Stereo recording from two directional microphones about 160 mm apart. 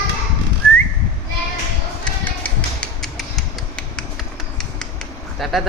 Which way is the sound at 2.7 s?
Centre (ahead or behind).